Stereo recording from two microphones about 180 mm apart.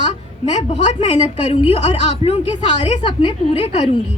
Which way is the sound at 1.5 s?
40° left (ahead or behind).